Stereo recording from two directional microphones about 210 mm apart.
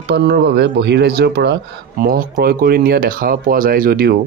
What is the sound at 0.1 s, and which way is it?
Speech, 50° right (ahead or behind).